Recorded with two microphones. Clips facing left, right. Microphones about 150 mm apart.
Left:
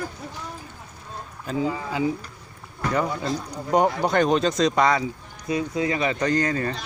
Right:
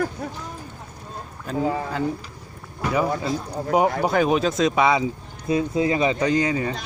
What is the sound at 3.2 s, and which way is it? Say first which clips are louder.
Speech: right 2 dB; 5° right (ahead or behind).